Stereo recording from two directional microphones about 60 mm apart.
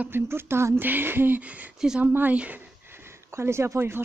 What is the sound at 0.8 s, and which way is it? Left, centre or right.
Speech, right.